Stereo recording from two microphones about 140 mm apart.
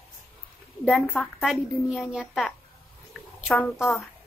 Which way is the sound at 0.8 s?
10° left (ahead or behind).